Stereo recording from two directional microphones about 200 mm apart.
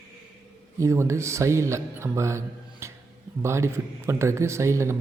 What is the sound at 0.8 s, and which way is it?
A man's voice, 15° right (ahead or behind).